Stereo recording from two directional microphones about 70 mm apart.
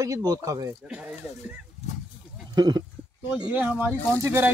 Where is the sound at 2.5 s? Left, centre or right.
Right.